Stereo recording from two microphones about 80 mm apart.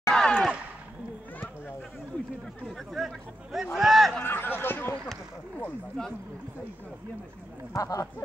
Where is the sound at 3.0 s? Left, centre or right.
Centre.